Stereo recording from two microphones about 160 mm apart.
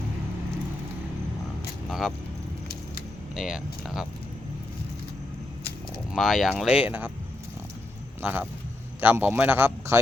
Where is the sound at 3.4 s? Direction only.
Centre (ahead or behind).